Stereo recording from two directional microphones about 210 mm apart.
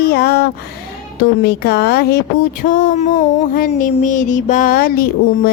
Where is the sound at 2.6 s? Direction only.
40° left (ahead or behind).